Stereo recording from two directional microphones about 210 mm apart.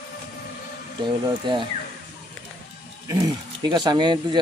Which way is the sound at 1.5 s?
20° right (ahead or behind).